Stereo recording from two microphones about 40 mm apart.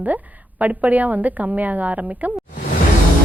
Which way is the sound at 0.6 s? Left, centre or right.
Right.